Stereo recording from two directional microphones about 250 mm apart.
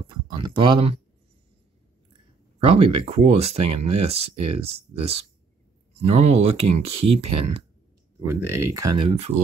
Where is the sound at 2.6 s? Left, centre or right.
Right.